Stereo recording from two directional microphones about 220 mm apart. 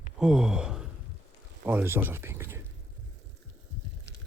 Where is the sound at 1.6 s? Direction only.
10° right (ahead or behind).